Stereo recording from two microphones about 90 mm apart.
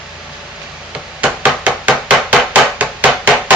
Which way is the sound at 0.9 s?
15° right (ahead or behind).